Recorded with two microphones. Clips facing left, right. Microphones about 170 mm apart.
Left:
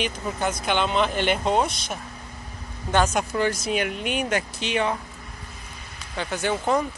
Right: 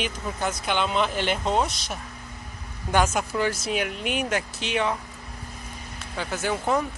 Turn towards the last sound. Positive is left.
turn(degrees=0)  # may be behind; listen again after turning